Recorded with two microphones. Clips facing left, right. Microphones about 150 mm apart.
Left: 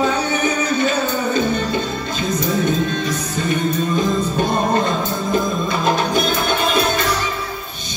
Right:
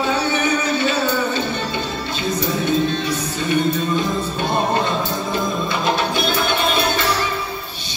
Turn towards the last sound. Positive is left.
turn(degrees=45)  # may be behind; listen again after turning